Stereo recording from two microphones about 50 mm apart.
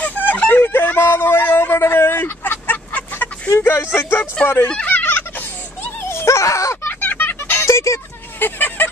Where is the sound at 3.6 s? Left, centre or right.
Left.